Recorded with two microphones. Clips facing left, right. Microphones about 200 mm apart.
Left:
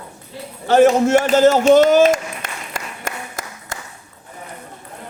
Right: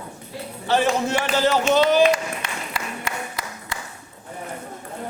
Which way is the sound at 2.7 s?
45° left (ahead or behind).